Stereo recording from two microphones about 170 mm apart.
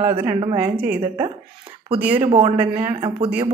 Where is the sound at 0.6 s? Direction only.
10° right (ahead or behind).